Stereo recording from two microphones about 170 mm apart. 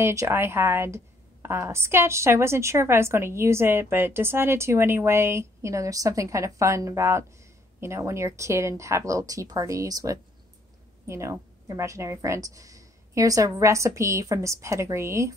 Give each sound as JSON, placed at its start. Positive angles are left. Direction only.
{"t": 0.0, "sound": "a woman's voice", "side_deg": -15}